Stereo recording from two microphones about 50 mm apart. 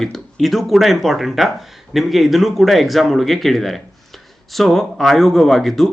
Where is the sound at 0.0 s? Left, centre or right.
Centre.